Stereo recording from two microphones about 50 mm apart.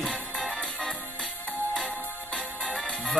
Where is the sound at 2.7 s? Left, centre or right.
Centre.